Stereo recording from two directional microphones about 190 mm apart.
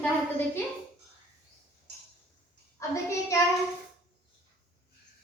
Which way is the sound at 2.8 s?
15° left (ahead or behind).